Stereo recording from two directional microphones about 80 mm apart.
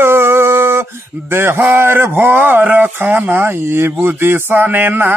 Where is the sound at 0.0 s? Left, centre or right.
Right.